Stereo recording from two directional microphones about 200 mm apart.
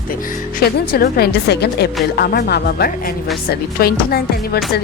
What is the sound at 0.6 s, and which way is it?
Speech, 50° left (ahead or behind).